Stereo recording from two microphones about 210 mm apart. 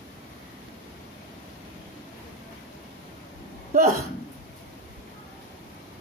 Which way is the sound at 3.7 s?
40° right (ahead or behind).